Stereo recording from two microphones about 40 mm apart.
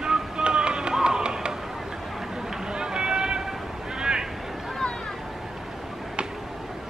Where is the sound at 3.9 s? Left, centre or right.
Centre.